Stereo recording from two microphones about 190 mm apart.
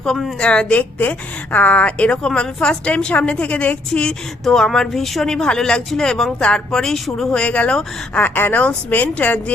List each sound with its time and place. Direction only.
0.0 s a woman's voice: 5° left (ahead or behind)